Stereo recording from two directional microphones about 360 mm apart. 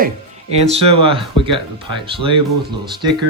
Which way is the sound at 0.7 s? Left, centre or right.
Centre.